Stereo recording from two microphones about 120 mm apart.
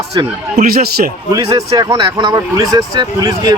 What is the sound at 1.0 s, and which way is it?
Speech, 90° right.